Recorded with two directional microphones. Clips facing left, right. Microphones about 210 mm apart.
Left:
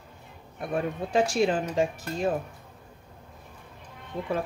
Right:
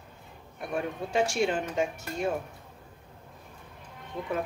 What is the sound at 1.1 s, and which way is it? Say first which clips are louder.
Speech: left 3 dB; 35° left (ahead or behind).